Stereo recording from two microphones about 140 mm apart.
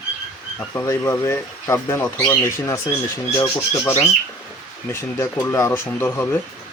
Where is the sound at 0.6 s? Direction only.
20° left (ahead or behind).